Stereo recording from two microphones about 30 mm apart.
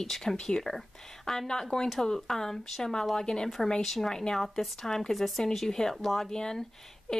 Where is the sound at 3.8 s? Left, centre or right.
Centre.